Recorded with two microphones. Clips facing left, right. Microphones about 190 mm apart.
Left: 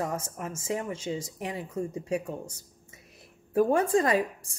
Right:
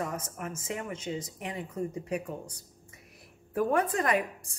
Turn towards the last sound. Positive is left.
turn(degrees=30)  # may be behind; listen again after turning